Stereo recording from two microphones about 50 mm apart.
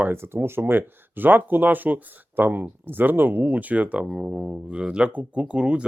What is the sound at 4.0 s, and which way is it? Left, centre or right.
Speech, centre.